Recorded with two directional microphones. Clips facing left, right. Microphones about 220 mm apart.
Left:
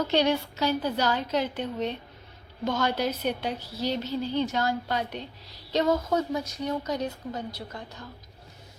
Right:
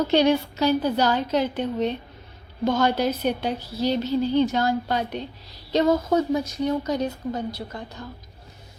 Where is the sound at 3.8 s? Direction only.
90° right.